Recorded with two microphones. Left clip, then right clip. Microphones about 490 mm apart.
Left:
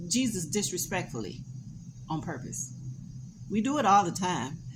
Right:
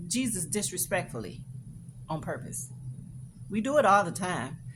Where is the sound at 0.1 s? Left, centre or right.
Right.